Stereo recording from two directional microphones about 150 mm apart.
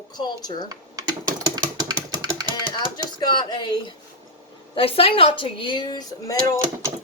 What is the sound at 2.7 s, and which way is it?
A woman's voice, 30° left (ahead or behind).